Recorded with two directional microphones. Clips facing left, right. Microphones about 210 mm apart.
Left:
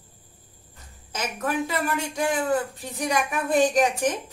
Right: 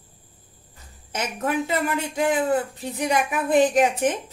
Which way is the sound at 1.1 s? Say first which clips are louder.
Right 2 dB; 25° right (ahead or behind).